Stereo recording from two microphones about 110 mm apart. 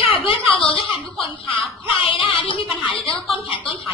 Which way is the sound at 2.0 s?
50° left (ahead or behind).